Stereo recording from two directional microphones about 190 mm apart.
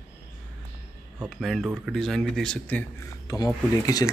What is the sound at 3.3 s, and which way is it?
Speech, 20° left (ahead or behind).